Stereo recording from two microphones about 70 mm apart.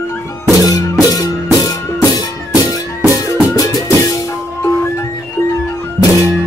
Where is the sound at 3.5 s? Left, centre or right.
Left.